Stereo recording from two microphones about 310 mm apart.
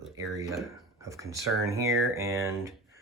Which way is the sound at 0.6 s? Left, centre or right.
Centre.